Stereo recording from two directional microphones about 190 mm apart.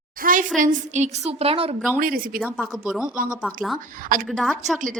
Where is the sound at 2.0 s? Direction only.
50° right (ahead or behind).